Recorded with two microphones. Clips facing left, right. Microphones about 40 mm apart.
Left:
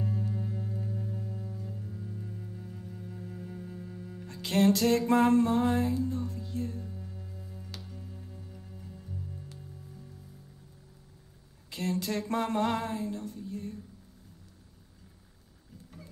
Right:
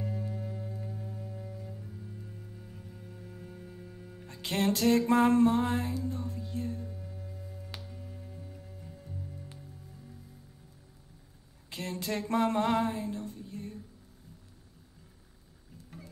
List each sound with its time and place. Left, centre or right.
0.3 s music: centre
1.0 s music: centre
1.7 s music: centre
4.3 s music: right
7.9 s music: centre
11.7 s speech: right
12.4 s music: right